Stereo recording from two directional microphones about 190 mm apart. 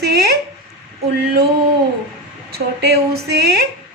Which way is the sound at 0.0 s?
60° right (ahead or behind).